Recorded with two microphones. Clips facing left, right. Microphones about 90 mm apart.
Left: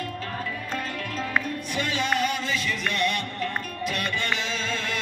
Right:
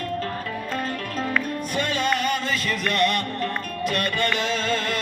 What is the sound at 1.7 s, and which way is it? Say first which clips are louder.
Music: right 2 dB; 45° right (ahead or behind).